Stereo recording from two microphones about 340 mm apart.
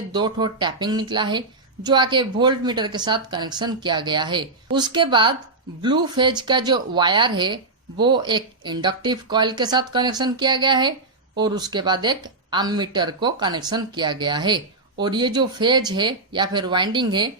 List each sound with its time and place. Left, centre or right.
0.1 s a woman's voice: centre